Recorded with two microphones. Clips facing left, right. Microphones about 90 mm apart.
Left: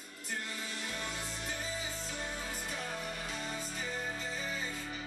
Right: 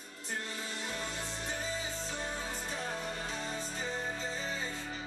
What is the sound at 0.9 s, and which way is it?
Music, 30° right (ahead or behind).